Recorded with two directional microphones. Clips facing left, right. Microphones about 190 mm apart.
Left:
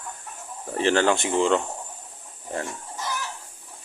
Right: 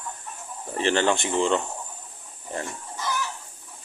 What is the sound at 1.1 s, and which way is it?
Speech, 10° left (ahead or behind).